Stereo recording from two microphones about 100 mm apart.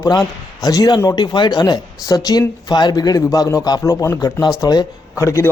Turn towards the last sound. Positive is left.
turn(degrees=30)  # may be behind; listen again after turning